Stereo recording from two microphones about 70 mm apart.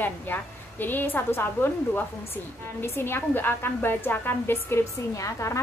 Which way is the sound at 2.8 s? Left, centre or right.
Left.